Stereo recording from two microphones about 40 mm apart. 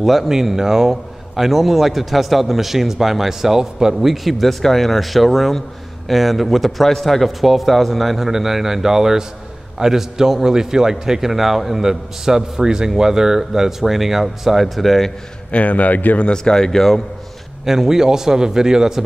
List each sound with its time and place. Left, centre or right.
0.0 s a man's voice: centre
15.5 s a man's voice: left
16.2 s speech: centre
17.6 s a man's voice: centre